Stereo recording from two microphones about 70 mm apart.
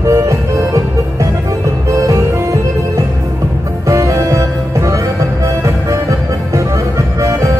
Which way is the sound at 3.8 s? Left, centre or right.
Right.